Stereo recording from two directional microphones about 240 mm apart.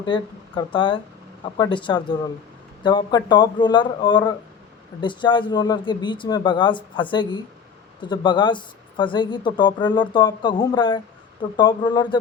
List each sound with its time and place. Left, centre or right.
0.0 s speech: centre